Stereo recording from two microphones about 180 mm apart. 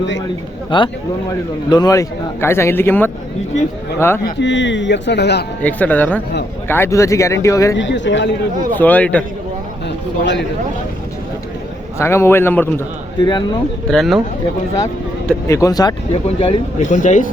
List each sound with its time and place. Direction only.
0.7 s speech: 25° left (ahead or behind)
4.4 s a man's voice: 85° left; by 5.5 s 70° left (ahead or behind)
5.6 s speech: 10° left (ahead or behind)
7.8 s a man's voice: 90° left
8.8 s speech: 10° left (ahead or behind)
11.9 s speech: 15° left (ahead or behind)
13.2 s speech: 25° left (ahead or behind)
13.8 s speech: centre (ahead or behind)
15.3 s speech: 15° left (ahead or behind)
16.2 s speech: 35° left (ahead or behind)